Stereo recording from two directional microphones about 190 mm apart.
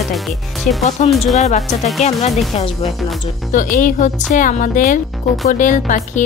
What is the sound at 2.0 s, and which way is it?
Speech, 35° left (ahead or behind).